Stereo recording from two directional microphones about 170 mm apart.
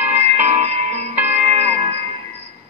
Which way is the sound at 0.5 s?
40° right (ahead or behind).